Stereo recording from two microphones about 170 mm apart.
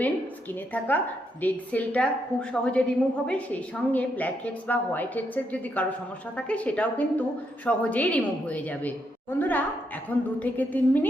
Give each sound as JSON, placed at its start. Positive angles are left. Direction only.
{"t": 0.7, "sound": "a woman's voice", "side_deg": 10}